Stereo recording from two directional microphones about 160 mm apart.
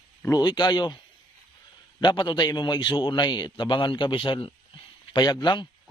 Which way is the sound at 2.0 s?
30° left (ahead or behind).